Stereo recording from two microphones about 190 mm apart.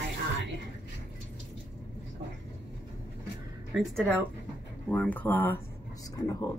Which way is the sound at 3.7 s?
Centre (ahead or behind).